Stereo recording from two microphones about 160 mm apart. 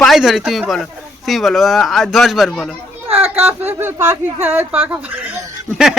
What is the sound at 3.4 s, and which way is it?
Speech, 15° right (ahead or behind).